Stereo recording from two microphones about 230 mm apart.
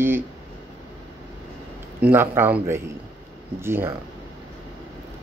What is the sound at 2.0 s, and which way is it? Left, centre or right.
Speech, centre.